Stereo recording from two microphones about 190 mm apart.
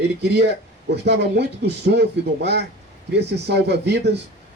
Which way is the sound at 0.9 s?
60° right (ahead or behind).